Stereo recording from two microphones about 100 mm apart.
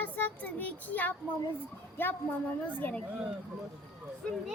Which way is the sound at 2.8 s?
15° left (ahead or behind).